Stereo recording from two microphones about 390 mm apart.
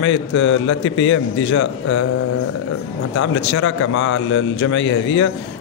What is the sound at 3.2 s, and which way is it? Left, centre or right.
A man's voice, left.